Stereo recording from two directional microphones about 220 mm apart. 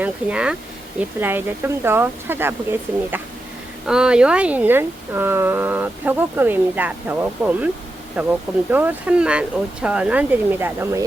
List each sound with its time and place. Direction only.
0.0 s speech: 5° right (ahead or behind)
3.8 s speech: 5° right (ahead or behind)